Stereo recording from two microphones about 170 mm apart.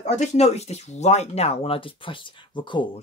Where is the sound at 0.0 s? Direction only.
40° left (ahead or behind).